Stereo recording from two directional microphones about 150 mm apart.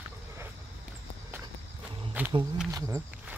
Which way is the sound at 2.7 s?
20° right (ahead or behind).